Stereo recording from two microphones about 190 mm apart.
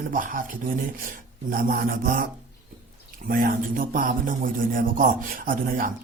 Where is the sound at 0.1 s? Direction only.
45° right (ahead or behind).